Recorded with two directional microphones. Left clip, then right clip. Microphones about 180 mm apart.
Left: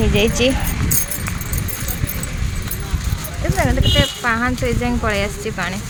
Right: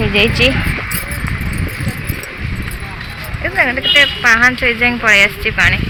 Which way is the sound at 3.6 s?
20° left (ahead or behind).